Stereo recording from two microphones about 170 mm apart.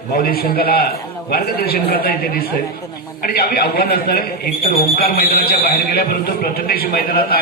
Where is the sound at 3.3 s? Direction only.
65° left (ahead or behind).